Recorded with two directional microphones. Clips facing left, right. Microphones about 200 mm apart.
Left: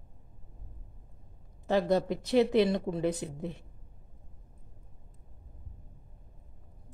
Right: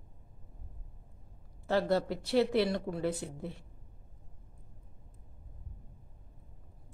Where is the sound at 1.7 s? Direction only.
15° left (ahead or behind).